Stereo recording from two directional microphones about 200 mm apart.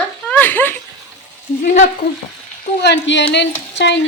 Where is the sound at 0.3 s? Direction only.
10° left (ahead or behind).